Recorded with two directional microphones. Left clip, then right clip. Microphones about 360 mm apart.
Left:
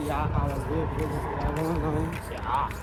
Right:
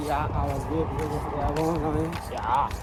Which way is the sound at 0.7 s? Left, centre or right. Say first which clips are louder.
Right 2 dB; right.